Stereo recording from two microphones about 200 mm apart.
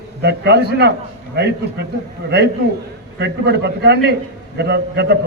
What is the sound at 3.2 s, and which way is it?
A man's voice, 55° right (ahead or behind).